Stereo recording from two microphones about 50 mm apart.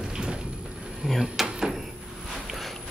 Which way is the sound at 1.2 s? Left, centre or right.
Centre.